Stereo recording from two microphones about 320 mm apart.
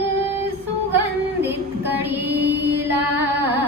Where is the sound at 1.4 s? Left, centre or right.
Centre.